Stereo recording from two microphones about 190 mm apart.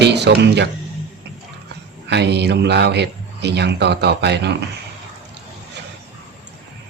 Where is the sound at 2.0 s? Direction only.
65° right (ahead or behind).